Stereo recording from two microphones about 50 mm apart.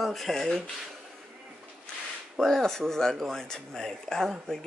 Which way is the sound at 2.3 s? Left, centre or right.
Centre.